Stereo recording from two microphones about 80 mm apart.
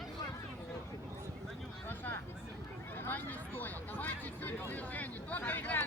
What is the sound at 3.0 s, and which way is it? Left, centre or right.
Vehicle, left.